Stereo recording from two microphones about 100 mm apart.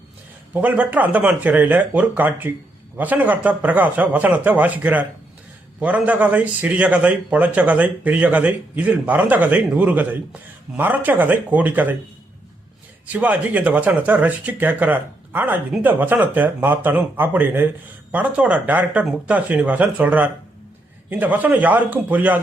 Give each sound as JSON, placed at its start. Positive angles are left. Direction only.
{"t": 0.5, "sound": "a man's voice", "side_deg": -15}
{"t": 13.1, "sound": "a man's voice", "side_deg": -15}